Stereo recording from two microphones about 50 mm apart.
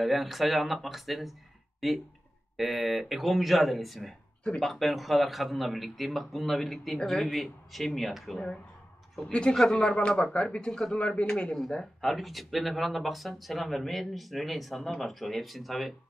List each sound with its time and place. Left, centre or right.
0.0 s speech: centre
9.3 s speech: centre
11.7 s speech: centre